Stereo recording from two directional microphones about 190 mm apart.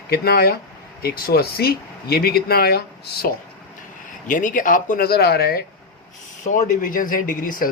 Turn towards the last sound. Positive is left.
turn(degrees=45)  # may be behind; listen again after turning